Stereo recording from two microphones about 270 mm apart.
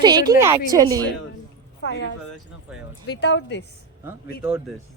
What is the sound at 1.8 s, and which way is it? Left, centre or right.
Speech, left.